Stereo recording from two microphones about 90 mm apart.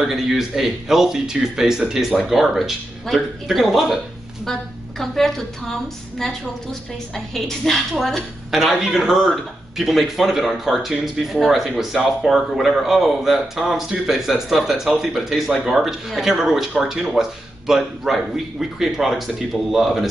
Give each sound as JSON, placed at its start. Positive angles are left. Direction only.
{"t": 0.0, "sound": "a woman's voice", "side_deg": -5}
{"t": 7.3, "sound": "a woman's voice", "side_deg": 5}